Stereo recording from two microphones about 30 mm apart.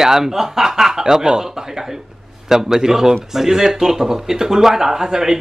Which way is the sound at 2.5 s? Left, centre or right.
Centre.